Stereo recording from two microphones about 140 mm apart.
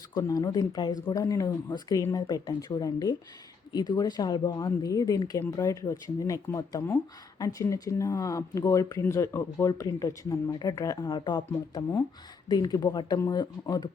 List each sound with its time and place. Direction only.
0.1 s speech: 25° left (ahead or behind)